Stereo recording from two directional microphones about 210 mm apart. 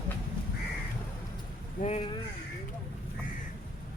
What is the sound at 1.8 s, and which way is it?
Speech, 40° left (ahead or behind).